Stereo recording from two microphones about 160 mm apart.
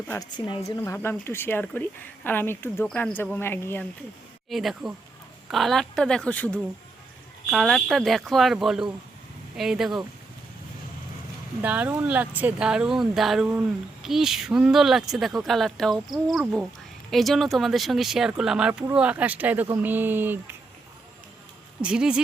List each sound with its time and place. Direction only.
0.3 s a woman's voice: 30° left (ahead or behind)
0.9 s speech: 15° left (ahead or behind)
4.4 s speech: centre (ahead or behind)
11.6 s speech: 10° right (ahead or behind)
21.8 s speech: 5° right (ahead or behind)